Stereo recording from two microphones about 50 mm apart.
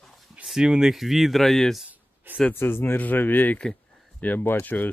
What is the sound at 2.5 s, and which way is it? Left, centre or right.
Speech, left.